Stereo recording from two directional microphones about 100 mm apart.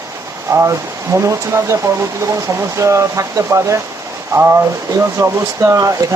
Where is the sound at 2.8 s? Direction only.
30° right (ahead or behind).